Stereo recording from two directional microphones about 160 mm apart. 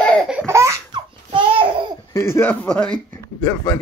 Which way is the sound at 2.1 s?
15° left (ahead or behind).